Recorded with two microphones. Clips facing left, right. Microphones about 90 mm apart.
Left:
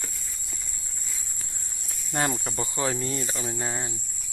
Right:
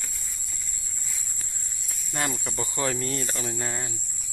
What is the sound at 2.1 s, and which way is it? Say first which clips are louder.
Cricket: left 3 dB; 35° left (ahead or behind).